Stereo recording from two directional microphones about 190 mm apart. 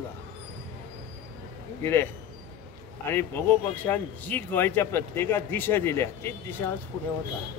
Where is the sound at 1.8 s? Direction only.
10° left (ahead or behind).